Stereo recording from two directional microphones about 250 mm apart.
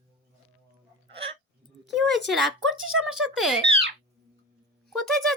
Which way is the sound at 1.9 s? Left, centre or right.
Centre.